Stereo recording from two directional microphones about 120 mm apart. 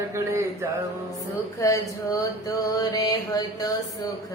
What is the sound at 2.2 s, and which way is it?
Mantra, 30° left (ahead or behind).